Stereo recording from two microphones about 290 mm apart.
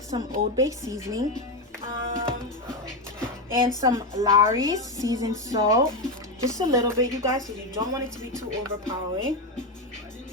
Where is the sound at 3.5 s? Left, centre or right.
Centre.